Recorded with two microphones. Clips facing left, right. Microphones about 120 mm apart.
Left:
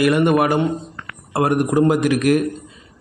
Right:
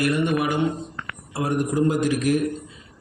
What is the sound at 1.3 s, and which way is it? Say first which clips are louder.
A man's voice: left 6 dB; 75° left (ahead or behind).